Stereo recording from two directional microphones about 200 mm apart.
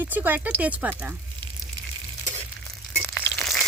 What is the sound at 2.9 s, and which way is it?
Crushing, centre (ahead or behind).